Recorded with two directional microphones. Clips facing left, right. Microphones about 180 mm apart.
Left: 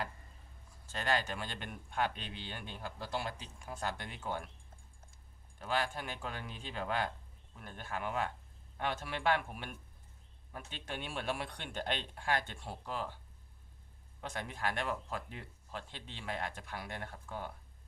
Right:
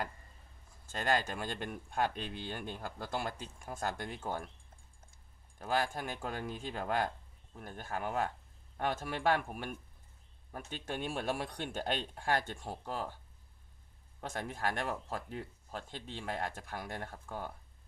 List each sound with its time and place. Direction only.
0.9 s speech: 45° right (ahead or behind)
5.5 s speech: 45° right (ahead or behind)
14.2 s speech: 45° right (ahead or behind)